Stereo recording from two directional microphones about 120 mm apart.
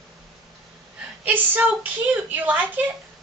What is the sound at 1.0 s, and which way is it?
A woman's voice, 15° right (ahead or behind).